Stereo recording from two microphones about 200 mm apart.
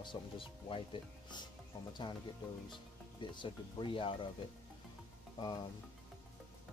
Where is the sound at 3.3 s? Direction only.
25° left (ahead or behind).